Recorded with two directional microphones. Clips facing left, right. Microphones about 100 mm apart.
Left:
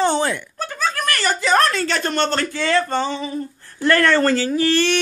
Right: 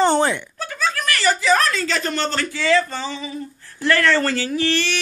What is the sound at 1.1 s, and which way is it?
Speech, 50° left (ahead or behind).